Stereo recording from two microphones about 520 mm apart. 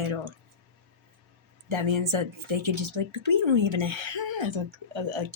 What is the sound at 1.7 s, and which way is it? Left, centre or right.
Speech, right.